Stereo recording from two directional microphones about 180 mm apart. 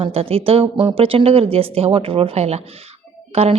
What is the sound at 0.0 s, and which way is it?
A woman's voice, 35° right (ahead or behind).